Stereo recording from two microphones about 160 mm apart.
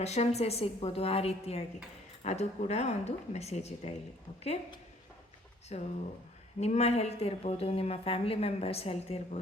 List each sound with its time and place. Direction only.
0.0 s a woman's voice: 40° left (ahead or behind)
5.7 s a woman's voice: 40° left (ahead or behind)